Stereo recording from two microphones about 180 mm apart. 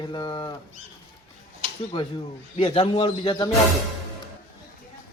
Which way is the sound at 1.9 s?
30° left (ahead or behind).